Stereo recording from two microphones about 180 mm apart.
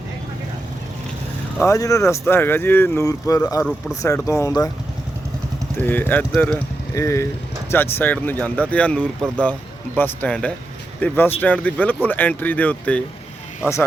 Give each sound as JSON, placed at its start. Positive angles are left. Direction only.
{"t": 1.6, "sound": "speech", "side_deg": 15}
{"t": 5.7, "sound": "speech", "side_deg": 10}